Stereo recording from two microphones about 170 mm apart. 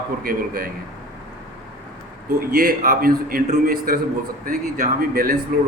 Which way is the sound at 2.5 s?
55° right (ahead or behind).